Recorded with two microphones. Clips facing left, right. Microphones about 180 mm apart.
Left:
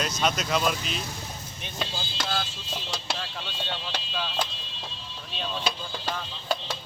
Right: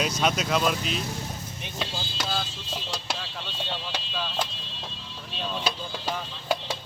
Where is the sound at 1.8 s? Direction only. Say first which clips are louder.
Even; 5° right (ahead or behind).